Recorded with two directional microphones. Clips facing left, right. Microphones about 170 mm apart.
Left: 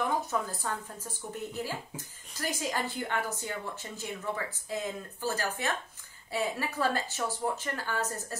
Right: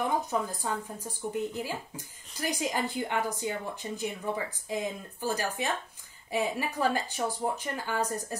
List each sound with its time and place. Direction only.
0.3 s speech: 15° right (ahead or behind)